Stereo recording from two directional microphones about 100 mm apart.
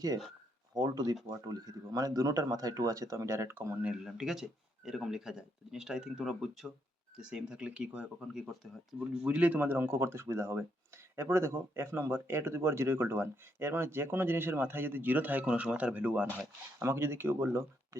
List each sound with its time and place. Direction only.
0.7 s speech: 40° right (ahead or behind); by 3.8 s 25° right (ahead or behind)
3.8 s speech: 5° right (ahead or behind)
9.0 s speech: 15° right (ahead or behind)